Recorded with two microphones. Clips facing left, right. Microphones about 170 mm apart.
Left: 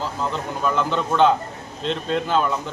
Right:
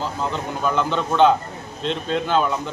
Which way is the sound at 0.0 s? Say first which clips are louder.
Right 1 dB; centre (ahead or behind).